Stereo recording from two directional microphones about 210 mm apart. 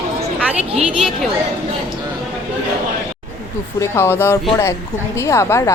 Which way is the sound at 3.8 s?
10° left (ahead or behind).